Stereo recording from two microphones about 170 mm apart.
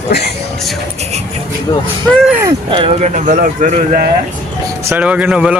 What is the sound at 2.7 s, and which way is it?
Speech, 35° right (ahead or behind).